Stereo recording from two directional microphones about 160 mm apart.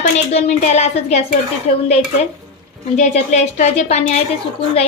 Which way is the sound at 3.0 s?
45° left (ahead or behind).